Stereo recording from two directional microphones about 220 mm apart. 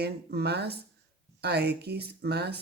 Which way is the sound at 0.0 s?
45° right (ahead or behind).